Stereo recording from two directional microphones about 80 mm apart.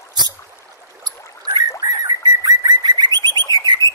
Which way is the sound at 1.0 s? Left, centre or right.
Right.